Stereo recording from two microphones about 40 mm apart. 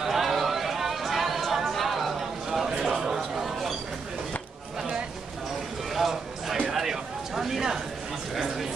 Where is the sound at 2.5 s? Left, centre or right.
Centre.